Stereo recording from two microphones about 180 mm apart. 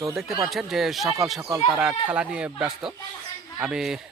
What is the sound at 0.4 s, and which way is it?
Speech, centre (ahead or behind).